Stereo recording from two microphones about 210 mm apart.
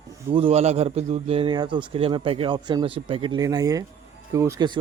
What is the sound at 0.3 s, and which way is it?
Speech, 30° right (ahead or behind).